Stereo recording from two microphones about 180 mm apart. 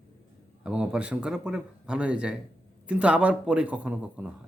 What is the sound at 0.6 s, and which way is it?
Speech, 5° right (ahead or behind).